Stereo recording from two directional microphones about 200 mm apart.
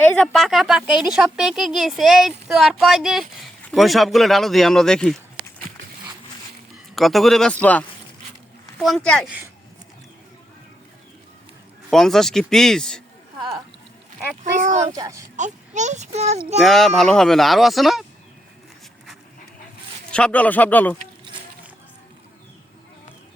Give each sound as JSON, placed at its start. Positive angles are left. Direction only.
{"t": 0.0, "sound": "speech", "side_deg": 5}
{"t": 6.9, "sound": "speech", "side_deg": 0}
{"t": 11.9, "sound": "speech", "side_deg": 0}
{"t": 14.6, "sound": "speech", "side_deg": -35}
{"t": 14.9, "sound": "speech", "side_deg": -15}
{"t": 15.4, "sound": "speech", "side_deg": -35}
{"t": 16.6, "sound": "speech", "side_deg": 0}
{"t": 20.1, "sound": "speech", "side_deg": 5}